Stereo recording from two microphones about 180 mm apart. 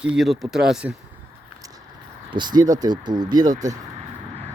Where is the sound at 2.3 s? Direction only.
25° right (ahead or behind).